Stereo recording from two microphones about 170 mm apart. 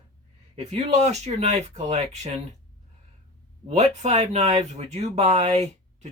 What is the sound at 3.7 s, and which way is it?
Speech, 40° right (ahead or behind).